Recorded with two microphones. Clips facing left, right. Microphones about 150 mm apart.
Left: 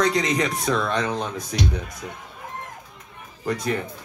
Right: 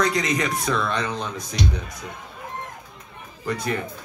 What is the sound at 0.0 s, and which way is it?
Speech, 30° left (ahead or behind).